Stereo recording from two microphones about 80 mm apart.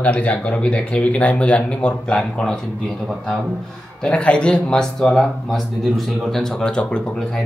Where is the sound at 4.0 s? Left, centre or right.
Centre.